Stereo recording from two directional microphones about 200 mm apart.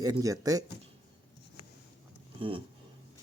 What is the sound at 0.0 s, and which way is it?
Speech, 15° right (ahead or behind).